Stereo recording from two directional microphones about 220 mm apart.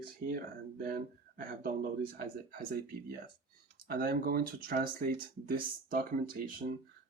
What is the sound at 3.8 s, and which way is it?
Speech, 45° right (ahead or behind).